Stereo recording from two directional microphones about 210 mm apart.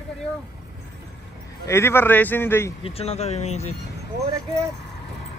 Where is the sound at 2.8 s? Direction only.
30° left (ahead or behind).